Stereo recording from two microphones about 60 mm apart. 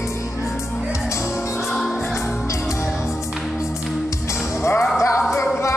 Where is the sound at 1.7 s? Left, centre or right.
Centre.